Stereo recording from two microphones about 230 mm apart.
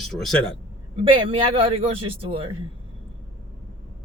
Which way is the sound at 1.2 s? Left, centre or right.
Right.